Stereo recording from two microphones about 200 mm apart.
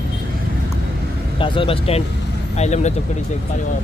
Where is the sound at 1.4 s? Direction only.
25° left (ahead or behind).